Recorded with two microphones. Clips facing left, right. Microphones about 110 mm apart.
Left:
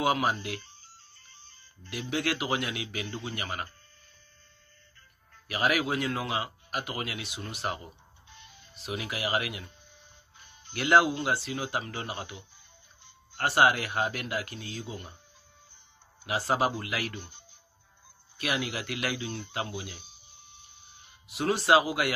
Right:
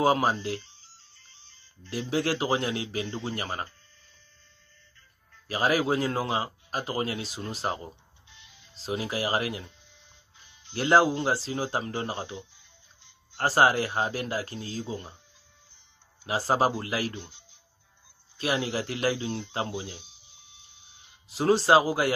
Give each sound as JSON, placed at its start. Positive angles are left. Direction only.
{"t": 0.0, "sound": "speech", "side_deg": -35}
{"t": 0.6, "sound": "music", "side_deg": 50}
{"t": 1.9, "sound": "speech", "side_deg": -30}
{"t": 5.5, "sound": "speech", "side_deg": -30}
{"t": 8.3, "sound": "music", "side_deg": 50}
{"t": 8.7, "sound": "speech", "side_deg": -30}
{"t": 9.7, "sound": "music", "side_deg": 50}
{"t": 10.7, "sound": "speech", "side_deg": -30}
{"t": 13.4, "sound": "speech", "side_deg": -35}
{"t": 16.3, "sound": "speech", "side_deg": -30}
{"t": 17.1, "sound": "speech", "side_deg": 50}
{"t": 18.4, "sound": "speech", "side_deg": -30}
{"t": 19.9, "sound": "a sound", "side_deg": 50}
{"t": 21.3, "sound": "speech", "side_deg": -30}